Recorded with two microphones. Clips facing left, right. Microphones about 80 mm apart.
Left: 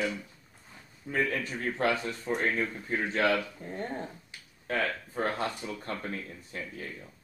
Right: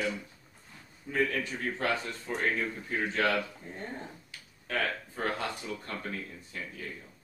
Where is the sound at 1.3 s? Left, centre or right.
Left.